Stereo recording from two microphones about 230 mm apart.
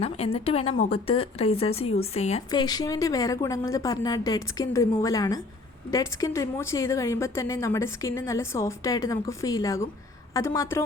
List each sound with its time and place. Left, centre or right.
0.0 s a woman's voice: left
2.5 s a woman's voice: centre